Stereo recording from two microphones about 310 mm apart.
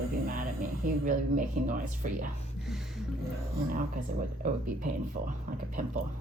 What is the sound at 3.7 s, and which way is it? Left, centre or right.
Speech, right.